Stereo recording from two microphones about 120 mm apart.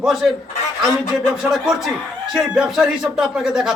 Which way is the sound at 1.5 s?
5° right (ahead or behind).